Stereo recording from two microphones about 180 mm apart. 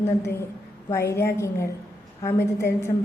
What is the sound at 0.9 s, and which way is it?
A woman's voice, 15° left (ahead or behind).